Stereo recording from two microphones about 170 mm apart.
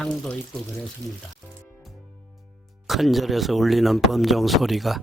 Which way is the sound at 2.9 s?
Centre (ahead or behind).